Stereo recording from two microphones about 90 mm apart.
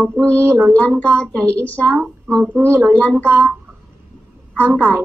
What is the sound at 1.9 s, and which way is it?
A woman's voice, 25° right (ahead or behind).